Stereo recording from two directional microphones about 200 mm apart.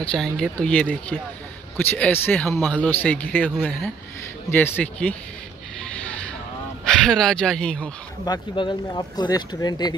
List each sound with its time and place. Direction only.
0.0 s speech: 5° left (ahead or behind)
6.8 s speech: centre (ahead or behind)
8.3 s speech: 20° left (ahead or behind)